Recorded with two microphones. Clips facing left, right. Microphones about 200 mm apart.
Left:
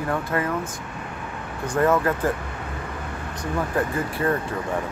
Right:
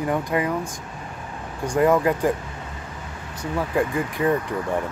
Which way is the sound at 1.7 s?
15° right (ahead or behind).